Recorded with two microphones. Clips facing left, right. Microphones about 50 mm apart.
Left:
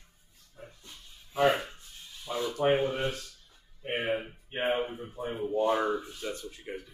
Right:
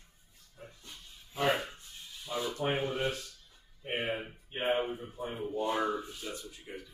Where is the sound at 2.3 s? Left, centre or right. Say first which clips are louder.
Left 3 dB; left.